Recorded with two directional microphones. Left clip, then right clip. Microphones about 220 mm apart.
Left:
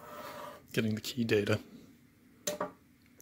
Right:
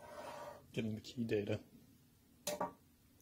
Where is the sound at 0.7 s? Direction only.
30° left (ahead or behind).